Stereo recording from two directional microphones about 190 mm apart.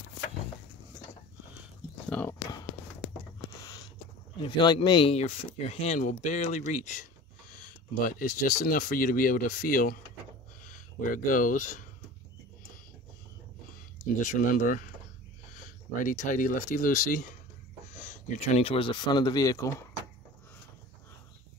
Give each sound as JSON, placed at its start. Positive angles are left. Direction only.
{"t": 2.0, "sound": "speech", "side_deg": 5}
{"t": 4.4, "sound": "speech", "side_deg": 25}
{"t": 11.0, "sound": "speech", "side_deg": 45}
{"t": 14.2, "sound": "speech", "side_deg": 45}